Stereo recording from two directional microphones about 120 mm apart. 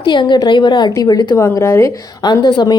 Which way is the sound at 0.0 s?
40° left (ahead or behind).